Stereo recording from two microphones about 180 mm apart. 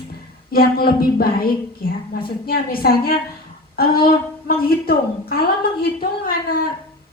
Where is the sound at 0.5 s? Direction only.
55° left (ahead or behind).